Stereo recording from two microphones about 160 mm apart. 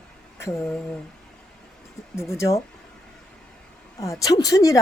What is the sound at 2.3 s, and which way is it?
Speech, 15° left (ahead or behind).